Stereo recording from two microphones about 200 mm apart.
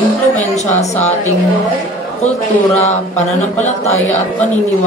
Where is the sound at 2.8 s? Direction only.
35° left (ahead or behind).